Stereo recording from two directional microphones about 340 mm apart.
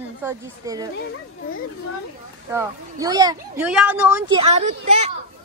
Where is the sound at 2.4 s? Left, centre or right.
Centre.